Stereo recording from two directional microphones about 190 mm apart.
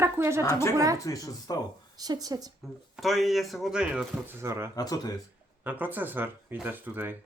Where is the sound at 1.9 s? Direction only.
20° right (ahead or behind).